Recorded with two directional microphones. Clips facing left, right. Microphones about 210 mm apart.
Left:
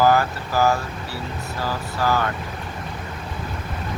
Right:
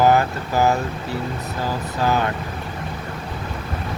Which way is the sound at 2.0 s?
20° right (ahead or behind).